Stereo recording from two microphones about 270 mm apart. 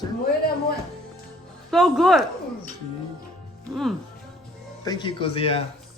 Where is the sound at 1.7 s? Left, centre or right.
Centre.